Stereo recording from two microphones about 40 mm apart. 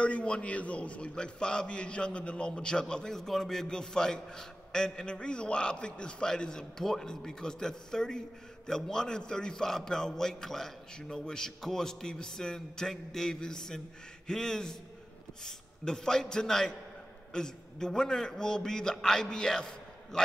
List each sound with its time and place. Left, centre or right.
0.0 s a man's voice: left